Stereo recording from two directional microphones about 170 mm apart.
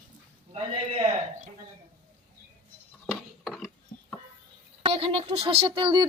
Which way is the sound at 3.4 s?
Centre (ahead or behind).